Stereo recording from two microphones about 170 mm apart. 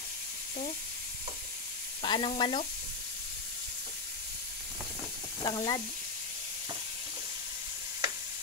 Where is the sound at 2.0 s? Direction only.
30° left (ahead or behind).